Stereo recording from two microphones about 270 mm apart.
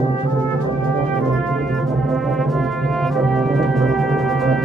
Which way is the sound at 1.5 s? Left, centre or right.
Centre.